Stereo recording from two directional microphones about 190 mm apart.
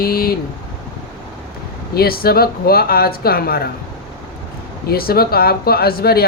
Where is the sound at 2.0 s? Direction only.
50° left (ahead or behind).